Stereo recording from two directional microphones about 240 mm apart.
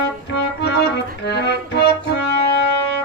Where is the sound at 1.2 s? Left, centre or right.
Left.